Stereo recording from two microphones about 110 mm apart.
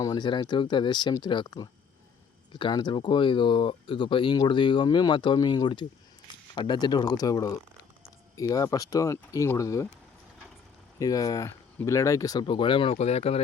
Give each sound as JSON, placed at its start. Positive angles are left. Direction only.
{"t": 0.0, "sound": "speech", "side_deg": 40}
{"t": 11.0, "sound": "speech", "side_deg": 35}
{"t": 11.4, "sound": "speech", "side_deg": 25}
{"t": 13.0, "sound": "speech", "side_deg": 75}